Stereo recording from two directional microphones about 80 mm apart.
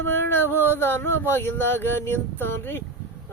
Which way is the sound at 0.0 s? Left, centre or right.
Left.